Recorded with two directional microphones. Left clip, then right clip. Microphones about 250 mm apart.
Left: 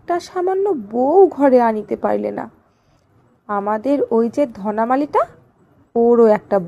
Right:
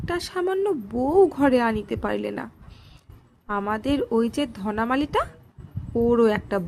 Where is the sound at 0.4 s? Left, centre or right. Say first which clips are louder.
Left 6 dB; centre.